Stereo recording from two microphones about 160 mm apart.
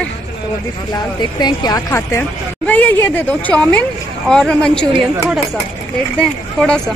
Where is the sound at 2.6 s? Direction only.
10° left (ahead or behind).